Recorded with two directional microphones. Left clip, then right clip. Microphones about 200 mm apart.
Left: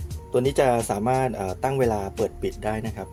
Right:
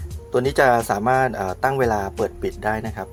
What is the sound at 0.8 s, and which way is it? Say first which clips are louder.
Speech: right 5 dB; 15° left (ahead or behind).